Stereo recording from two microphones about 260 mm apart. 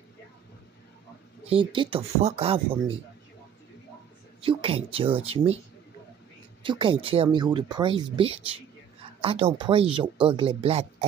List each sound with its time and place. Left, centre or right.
1.5 s speech: centre
4.4 s speech: right
6.6 s speech: centre